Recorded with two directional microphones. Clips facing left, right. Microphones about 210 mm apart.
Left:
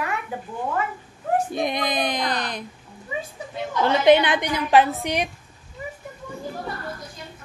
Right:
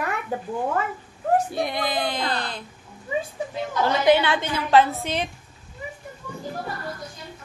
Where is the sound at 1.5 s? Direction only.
20° left (ahead or behind).